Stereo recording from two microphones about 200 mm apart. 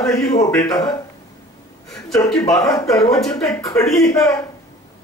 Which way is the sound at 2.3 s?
20° left (ahead or behind).